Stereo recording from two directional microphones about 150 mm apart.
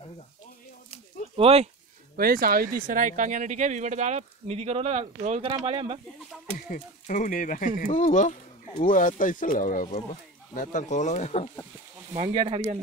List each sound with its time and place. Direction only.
1.3 s speech: 40° right (ahead or behind)
2.1 s speech: 80° right; by 5.9 s 35° right (ahead or behind)
6.7 s speech: 60° left (ahead or behind); by 11.5 s 45° left (ahead or behind)
12.1 s speech: 40° right (ahead or behind)